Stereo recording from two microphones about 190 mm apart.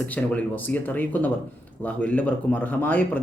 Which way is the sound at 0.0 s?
10° left (ahead or behind).